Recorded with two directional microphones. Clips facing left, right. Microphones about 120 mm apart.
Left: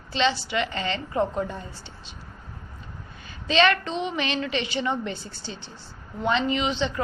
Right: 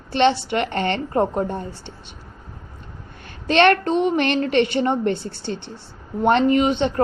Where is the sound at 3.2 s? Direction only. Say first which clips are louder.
Right 5 dB; 60° right (ahead or behind).